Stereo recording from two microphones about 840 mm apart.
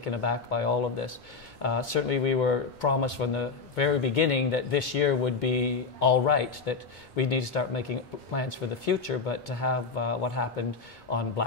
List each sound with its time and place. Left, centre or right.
0.0 s speech: left